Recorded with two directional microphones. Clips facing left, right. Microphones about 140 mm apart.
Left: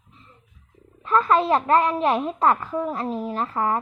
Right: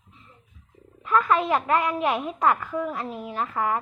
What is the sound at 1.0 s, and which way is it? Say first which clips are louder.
A woman's voice: left 3 dB; 30° left (ahead or behind).